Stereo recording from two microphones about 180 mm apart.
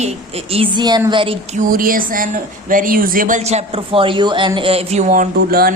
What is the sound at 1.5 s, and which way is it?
A woman's voice, 50° right (ahead or behind).